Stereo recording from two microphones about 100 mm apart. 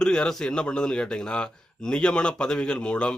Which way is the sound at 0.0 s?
5° left (ahead or behind).